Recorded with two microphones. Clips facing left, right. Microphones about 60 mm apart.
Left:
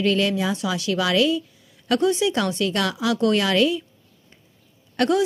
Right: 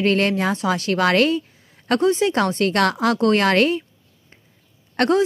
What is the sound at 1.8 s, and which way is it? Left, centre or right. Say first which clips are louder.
A woman's voice: right 2 dB; right.